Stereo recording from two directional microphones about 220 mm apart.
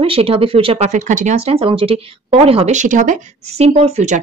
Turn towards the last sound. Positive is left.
turn(degrees=-30)  # may be behind; listen again after turning